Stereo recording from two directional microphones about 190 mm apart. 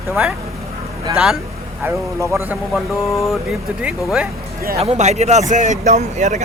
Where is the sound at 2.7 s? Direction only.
Centre (ahead or behind).